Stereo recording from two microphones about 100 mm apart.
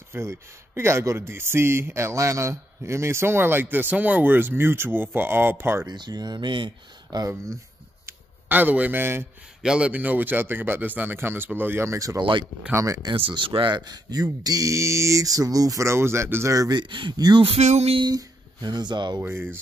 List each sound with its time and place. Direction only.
0.1 s speech: 25° right (ahead or behind)
5.9 s speech: 45° right (ahead or behind)
8.1 s speech: 20° right (ahead or behind)
9.6 s speech: 10° right (ahead or behind); by 13.0 s 30° right (ahead or behind)
13.0 s speech: 55° right (ahead or behind); by 16.5 s 25° right (ahead or behind)
16.5 s speech: 45° right (ahead or behind)
17.4 s a sound: 80° right
18.0 s speech: 45° right (ahead or behind)
19.2 s speech: 25° right (ahead or behind)